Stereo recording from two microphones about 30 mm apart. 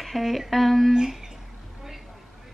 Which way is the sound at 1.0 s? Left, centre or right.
Right.